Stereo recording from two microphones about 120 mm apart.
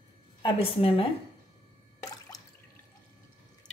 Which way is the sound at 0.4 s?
50° left (ahead or behind).